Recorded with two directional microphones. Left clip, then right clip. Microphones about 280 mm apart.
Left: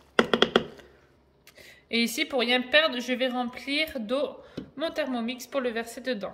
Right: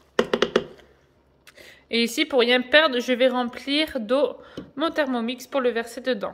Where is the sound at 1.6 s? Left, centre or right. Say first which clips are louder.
Right 4 dB; centre.